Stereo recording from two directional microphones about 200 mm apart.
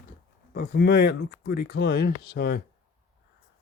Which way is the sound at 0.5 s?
50° left (ahead or behind).